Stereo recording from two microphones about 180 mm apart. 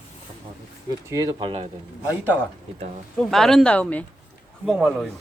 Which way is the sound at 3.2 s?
Centre (ahead or behind).